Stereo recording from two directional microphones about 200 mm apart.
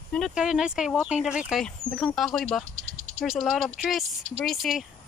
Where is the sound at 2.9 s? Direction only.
45° right (ahead or behind).